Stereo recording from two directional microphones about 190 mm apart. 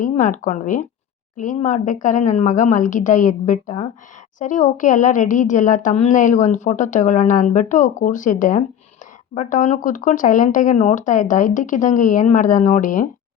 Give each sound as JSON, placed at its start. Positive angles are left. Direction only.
{"t": 0.0, "sound": "a woman's voice", "side_deg": 40}